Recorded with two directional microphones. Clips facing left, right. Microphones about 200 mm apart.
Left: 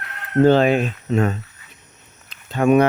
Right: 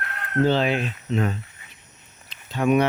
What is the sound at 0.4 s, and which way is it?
Speech, 50° left (ahead or behind).